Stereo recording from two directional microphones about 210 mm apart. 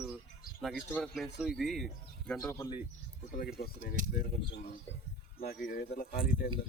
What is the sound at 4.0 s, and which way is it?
Speech, 40° right (ahead or behind).